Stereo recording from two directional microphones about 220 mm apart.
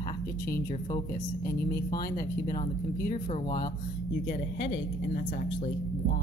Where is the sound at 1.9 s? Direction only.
40° left (ahead or behind).